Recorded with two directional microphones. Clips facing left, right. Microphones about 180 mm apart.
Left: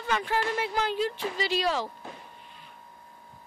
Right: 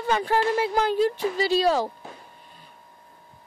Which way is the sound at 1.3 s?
35° right (ahead or behind).